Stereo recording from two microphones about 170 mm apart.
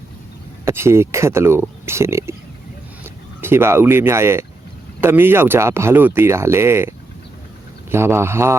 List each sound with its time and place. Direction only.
0.6 s speech: 15° right (ahead or behind)
3.4 s speech: 15° right (ahead or behind)